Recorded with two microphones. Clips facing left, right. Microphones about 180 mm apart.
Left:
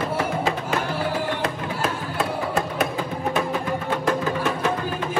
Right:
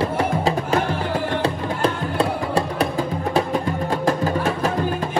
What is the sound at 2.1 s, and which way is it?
Music, 30° right (ahead or behind).